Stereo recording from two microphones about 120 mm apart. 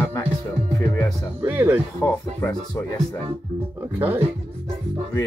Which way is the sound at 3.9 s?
15° right (ahead or behind).